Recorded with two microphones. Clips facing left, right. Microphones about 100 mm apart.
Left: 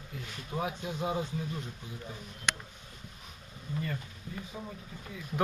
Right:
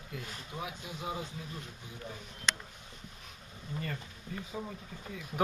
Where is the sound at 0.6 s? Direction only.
35° left (ahead or behind).